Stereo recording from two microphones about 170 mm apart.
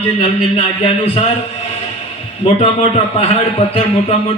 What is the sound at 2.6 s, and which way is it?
A man's voice, 35° left (ahead or behind).